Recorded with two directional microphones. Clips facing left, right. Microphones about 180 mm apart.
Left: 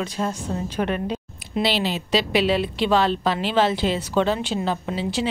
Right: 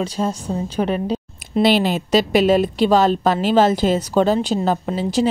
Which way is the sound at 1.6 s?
50° right (ahead or behind).